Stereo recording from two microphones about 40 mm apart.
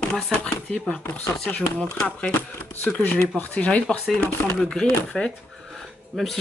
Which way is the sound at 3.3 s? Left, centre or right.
Left.